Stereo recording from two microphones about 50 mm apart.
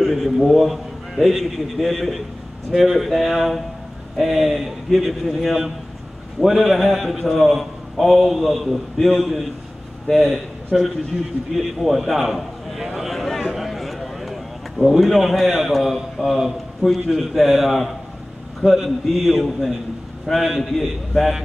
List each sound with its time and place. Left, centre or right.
0.0 s a man's voice: centre